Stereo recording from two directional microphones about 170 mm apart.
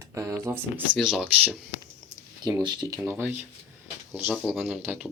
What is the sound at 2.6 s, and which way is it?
Speech, 25° right (ahead or behind).